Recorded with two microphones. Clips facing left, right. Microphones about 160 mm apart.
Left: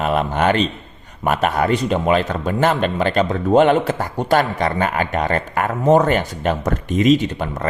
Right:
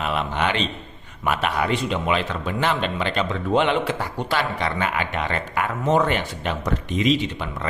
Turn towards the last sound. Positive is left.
turn(degrees=45)  # may be behind; listen again after turning